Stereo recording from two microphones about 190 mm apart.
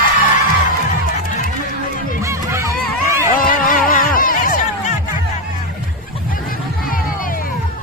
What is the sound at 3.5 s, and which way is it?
Music, 45° left (ahead or behind).